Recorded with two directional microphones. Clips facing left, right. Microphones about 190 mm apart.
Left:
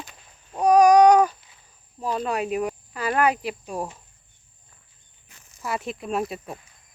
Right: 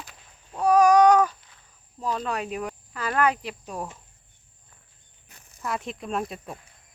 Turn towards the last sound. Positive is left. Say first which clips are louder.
# left 3 dB
turn(degrees=5)  # may be behind; listen again after turning